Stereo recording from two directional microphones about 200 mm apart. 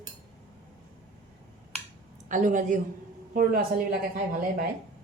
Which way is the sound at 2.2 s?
40° right (ahead or behind).